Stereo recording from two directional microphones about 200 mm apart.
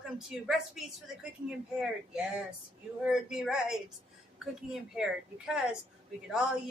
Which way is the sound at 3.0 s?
5° right (ahead or behind).